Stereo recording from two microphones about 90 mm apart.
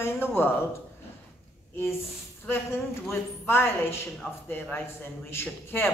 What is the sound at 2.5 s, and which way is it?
Speech, 25° left (ahead or behind).